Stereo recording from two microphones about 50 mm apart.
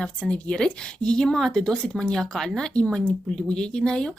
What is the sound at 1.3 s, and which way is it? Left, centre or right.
Speech, centre.